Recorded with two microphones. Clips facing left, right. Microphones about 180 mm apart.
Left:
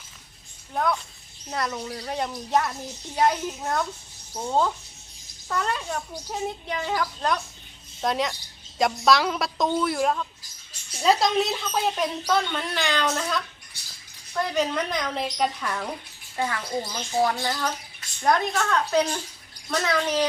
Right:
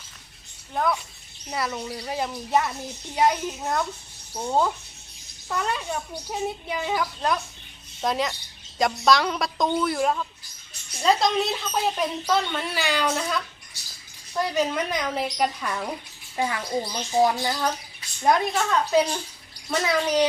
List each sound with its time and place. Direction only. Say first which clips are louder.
0.7 s a woman's voice: even; centre (ahead or behind)
16.4 s a woman's voice: right 2 dB; 15° right (ahead or behind)